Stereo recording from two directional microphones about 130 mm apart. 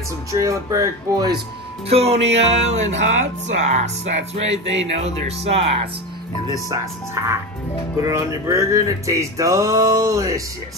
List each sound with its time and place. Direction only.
0.3 s music: 25° right (ahead or behind)
1.9 s music: 50° right (ahead or behind)
7.2 s music: 25° right (ahead or behind)